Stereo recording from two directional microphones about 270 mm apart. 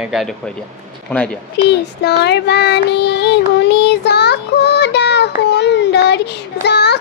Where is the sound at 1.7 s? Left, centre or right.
Left.